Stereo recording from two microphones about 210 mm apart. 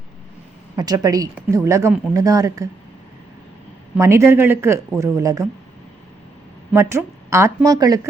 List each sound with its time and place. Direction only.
0.8 s a woman's voice: 20° right (ahead or behind)
3.9 s a woman's voice: 15° right (ahead or behind)
6.7 s a woman's voice: 15° right (ahead or behind)